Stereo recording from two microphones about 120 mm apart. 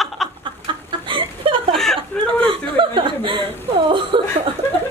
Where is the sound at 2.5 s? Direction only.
45° right (ahead or behind).